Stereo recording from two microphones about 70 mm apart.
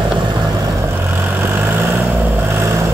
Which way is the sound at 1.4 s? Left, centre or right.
Right.